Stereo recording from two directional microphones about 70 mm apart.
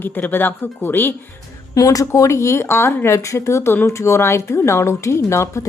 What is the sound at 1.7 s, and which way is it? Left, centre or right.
Speech, left.